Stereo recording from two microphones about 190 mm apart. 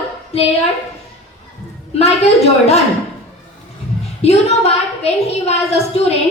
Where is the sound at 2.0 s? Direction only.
35° left (ahead or behind).